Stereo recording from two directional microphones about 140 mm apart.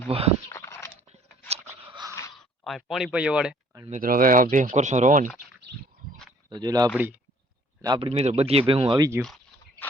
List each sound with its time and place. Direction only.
0.1 s speech: 45° right (ahead or behind)
0.5 s a sound: 20° left (ahead or behind)
1.0 s a sound: 50° right (ahead or behind)
2.6 s speech: centre (ahead or behind)
4.0 s speech: 90° right; by 5.3 s 65° right (ahead or behind)
6.5 s speech: 30° right (ahead or behind)
9.0 s speech: 20° right (ahead or behind)